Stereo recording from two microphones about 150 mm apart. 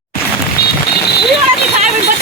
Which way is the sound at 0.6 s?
90° left.